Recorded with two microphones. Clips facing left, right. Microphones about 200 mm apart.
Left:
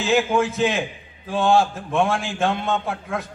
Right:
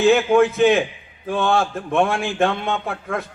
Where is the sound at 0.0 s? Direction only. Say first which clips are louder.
Right 5 dB; 60° right (ahead or behind).